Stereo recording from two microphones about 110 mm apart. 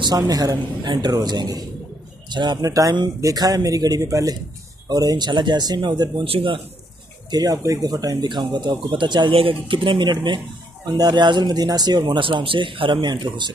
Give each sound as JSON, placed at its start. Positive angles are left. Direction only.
{"t": 0.0, "sound": "speech", "side_deg": -35}
{"t": 6.2, "sound": "a man's voice", "side_deg": -55}
{"t": 7.2, "sound": "speech", "side_deg": -35}